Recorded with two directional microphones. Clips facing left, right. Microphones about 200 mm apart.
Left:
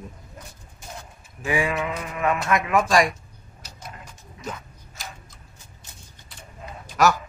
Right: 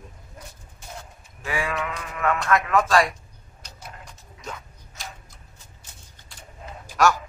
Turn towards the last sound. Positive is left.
turn(degrees=0)  # may be behind; listen again after turning